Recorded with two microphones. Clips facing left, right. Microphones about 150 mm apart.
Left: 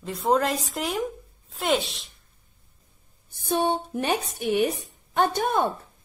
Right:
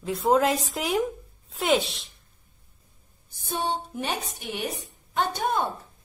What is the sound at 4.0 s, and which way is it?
Speech, 50° left (ahead or behind).